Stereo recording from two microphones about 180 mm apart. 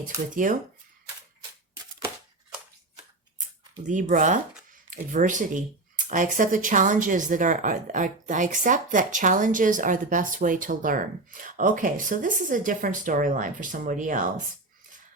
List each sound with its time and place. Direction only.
0.0 s speech: 45° right (ahead or behind)
3.8 s speech: 45° right (ahead or behind)